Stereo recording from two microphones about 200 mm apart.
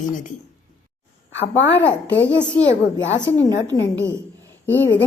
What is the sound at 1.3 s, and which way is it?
Speech, 65° left (ahead or behind).